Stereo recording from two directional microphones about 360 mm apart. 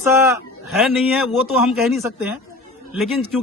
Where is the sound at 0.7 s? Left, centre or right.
Centre.